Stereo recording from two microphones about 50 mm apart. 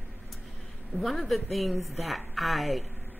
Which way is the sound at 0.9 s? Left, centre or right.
Centre.